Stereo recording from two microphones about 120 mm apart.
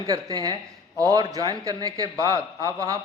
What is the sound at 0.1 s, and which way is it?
A man's voice, 35° right (ahead or behind).